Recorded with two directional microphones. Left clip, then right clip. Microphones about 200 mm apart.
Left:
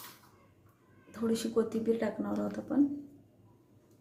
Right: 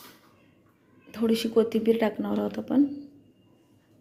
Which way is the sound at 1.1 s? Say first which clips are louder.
Right 7 dB; 25° right (ahead or behind).